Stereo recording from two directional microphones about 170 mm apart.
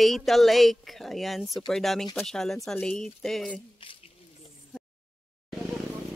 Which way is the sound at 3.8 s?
30° left (ahead or behind).